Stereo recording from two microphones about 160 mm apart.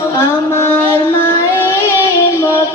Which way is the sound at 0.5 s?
15° left (ahead or behind).